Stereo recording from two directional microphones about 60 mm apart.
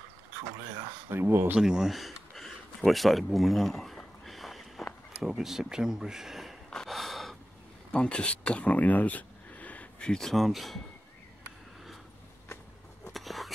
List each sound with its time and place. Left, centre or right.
1.1 s speech: right
1.6 s a sound: centre
5.4 s speech: centre
6.7 s gasp: centre
7.9 s speech: centre
13.1 s a sound: centre